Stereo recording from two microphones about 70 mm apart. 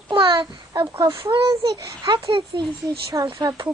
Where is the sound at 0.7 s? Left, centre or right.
Right.